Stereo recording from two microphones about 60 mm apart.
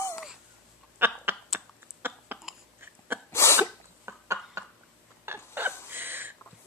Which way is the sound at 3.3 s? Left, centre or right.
Left.